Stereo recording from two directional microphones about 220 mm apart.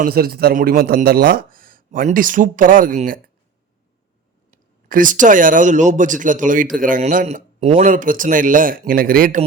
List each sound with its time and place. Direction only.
0.0 s speech: 45° right (ahead or behind)
4.5 s speech: 35° right (ahead or behind)